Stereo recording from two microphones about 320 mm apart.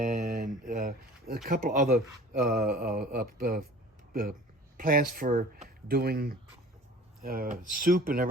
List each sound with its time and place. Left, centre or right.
0.0 s a sound: right
1.5 s mantra: right
4.1 s speech: right
4.8 s mantra: right